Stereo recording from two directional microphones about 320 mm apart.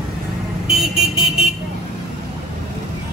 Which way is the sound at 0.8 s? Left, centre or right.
Centre.